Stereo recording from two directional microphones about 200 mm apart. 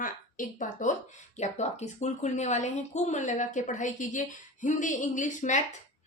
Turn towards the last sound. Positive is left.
turn(degrees=40)  # may be behind; listen again after turning